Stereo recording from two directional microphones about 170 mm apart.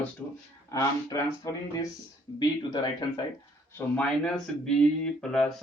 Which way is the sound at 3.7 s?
10° left (ahead or behind).